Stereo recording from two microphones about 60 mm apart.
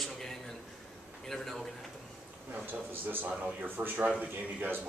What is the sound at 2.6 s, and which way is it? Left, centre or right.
A man's voice, right.